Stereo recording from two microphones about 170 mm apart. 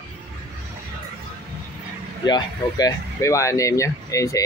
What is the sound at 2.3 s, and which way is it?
Speech, 25° left (ahead or behind).